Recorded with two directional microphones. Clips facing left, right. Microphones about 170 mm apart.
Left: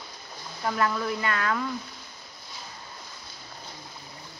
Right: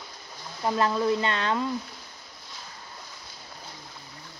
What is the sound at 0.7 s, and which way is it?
Speech, 25° right (ahead or behind).